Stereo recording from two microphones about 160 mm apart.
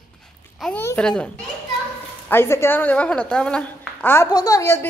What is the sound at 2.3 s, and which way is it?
A woman's voice, 15° left (ahead or behind).